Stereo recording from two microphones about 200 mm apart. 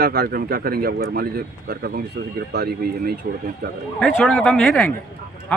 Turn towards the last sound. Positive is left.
turn(degrees=0)  # may be behind; listen again after turning